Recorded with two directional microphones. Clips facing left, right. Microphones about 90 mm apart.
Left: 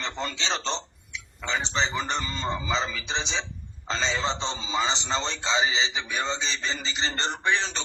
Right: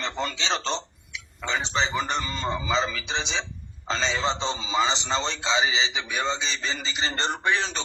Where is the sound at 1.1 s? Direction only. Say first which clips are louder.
Right 1 dB; 5° right (ahead or behind).